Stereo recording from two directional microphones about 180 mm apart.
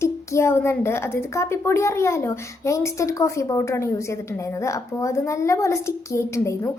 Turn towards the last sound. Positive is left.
turn(degrees=15)  # may be behind; listen again after turning